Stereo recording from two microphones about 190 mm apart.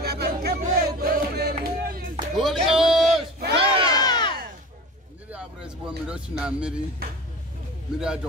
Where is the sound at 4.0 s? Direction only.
20° left (ahead or behind).